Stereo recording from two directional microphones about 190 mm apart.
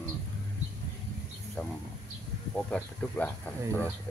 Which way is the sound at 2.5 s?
5° left (ahead or behind).